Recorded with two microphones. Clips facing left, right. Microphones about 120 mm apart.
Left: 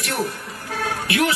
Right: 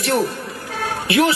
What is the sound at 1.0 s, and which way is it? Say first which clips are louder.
Speech: right 5 dB; 25° right (ahead or behind).